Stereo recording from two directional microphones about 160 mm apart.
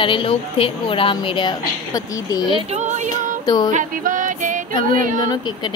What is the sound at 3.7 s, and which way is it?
Music, 50° right (ahead or behind).